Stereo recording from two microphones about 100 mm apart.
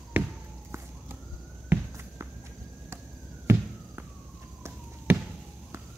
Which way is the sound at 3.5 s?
25° right (ahead or behind).